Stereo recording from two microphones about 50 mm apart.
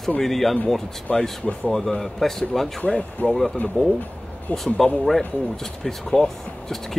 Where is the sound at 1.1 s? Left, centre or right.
Left.